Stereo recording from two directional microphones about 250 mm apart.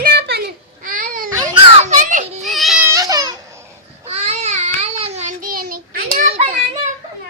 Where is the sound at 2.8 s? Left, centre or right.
Centre.